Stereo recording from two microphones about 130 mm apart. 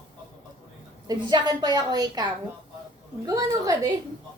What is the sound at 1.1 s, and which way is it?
A child's voice, 35° right (ahead or behind).